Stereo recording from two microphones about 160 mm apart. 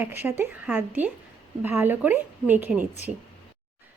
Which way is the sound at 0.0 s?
15° right (ahead or behind).